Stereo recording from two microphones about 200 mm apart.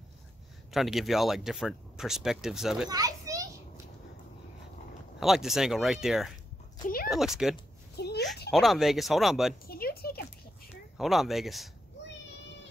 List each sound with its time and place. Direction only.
0.7 s speech: centre (ahead or behind)
2.9 s children playing: 20° right (ahead or behind)
5.2 s speech: centre (ahead or behind)
7.9 s a sound: 55° left (ahead or behind)
8.5 s speech: centre (ahead or behind)
9.7 s a sound: 50° left (ahead or behind)
11.0 s speech: centre (ahead or behind)